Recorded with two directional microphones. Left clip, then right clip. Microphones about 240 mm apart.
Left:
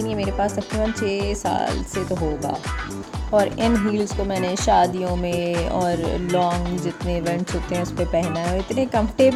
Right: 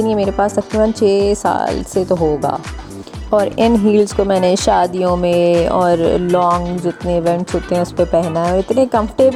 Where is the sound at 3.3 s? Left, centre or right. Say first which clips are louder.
Right 6 dB; right.